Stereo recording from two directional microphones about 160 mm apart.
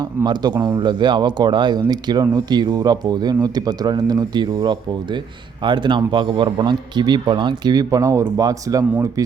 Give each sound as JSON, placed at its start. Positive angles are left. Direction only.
{"t": 0.3, "sound": "speech", "side_deg": -25}